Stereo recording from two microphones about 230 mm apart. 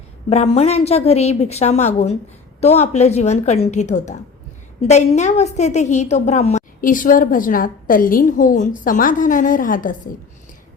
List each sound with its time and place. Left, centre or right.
0.3 s a woman's voice: left